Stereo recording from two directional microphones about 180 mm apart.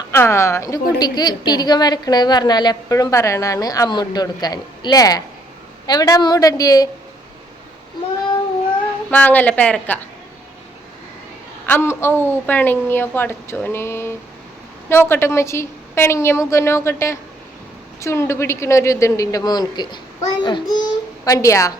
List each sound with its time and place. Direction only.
0.1 s a woman's voice: 15° left (ahead or behind)
9.0 s a woman's voice: 10° left (ahead or behind)
11.6 s a woman's voice: 10° left (ahead or behind)